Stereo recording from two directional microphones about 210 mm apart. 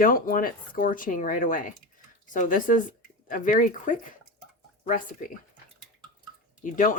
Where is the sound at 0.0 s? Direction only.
40° left (ahead or behind).